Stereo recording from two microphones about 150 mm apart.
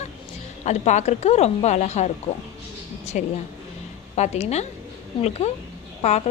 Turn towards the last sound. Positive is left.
turn(degrees=45)  # may be behind; listen again after turning